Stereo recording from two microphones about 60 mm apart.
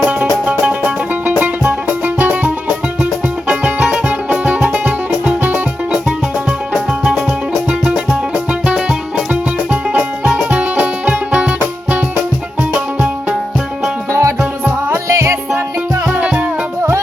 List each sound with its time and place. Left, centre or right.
1.4 s music: right
3.0 s music: centre
5.4 s music: right
6.7 s music: centre
14.1 s music: right
16.1 s music: right